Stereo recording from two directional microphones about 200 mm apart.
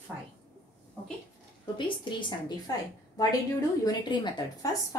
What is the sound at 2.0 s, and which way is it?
A woman's voice, 20° left (ahead or behind).